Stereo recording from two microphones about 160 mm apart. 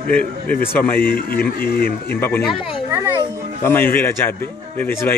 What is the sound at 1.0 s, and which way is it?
Speech, 65° left (ahead or behind).